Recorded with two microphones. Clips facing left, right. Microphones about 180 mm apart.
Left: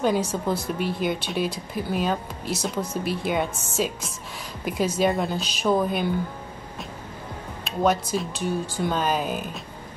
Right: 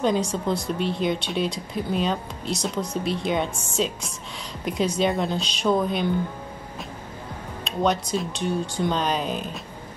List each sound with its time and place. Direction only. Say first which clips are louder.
0.0 s speech: even; 5° left (ahead or behind)
7.6 s speech: left 1 dB; 5° left (ahead or behind)